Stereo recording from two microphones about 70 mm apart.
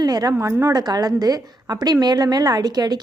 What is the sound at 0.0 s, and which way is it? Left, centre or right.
Speech, right.